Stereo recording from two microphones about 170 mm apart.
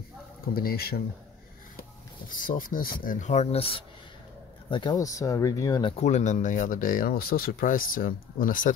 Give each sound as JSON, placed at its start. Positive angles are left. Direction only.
{"t": 0.6, "sound": "speech", "side_deg": 65}
{"t": 1.8, "sound": "speech", "side_deg": 55}
{"t": 5.9, "sound": "speech", "side_deg": 40}